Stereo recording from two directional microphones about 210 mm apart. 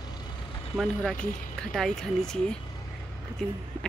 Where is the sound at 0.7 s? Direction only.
5° right (ahead or behind).